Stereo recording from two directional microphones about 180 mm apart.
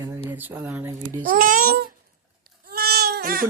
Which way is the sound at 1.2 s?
50° right (ahead or behind).